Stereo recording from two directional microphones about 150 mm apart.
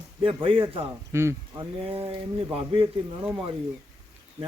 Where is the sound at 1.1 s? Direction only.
20° right (ahead or behind).